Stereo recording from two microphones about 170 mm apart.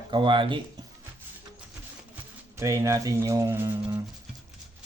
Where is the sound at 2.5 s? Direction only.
15° right (ahead or behind).